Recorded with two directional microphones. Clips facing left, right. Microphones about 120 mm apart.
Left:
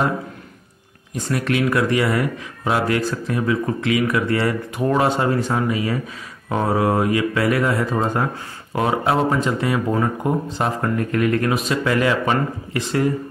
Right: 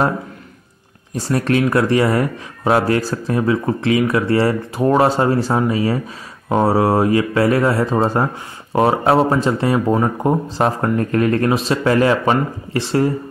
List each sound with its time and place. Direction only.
1.1 s speech: 35° right (ahead or behind)